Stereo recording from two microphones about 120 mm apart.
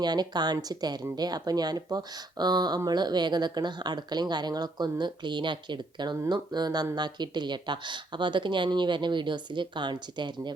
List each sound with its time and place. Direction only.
0.0 s speech: 35° right (ahead or behind)